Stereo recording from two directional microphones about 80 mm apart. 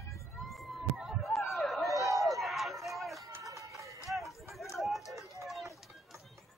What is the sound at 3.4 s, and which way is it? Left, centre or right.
Run, right.